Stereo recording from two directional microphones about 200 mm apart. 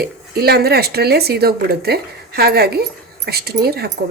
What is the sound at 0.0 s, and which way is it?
Speech, 50° right (ahead or behind).